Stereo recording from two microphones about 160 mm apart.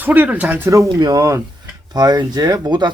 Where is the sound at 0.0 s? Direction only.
10° right (ahead or behind).